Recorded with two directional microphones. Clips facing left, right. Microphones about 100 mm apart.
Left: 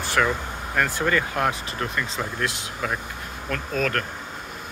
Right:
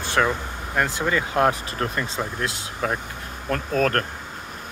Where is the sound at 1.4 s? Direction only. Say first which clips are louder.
Right 4 dB; 35° right (ahead or behind).